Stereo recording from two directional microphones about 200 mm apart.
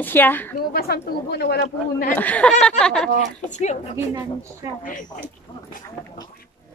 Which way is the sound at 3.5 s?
35° left (ahead or behind).